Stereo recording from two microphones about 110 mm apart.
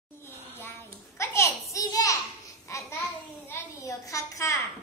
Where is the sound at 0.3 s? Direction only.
20° left (ahead or behind).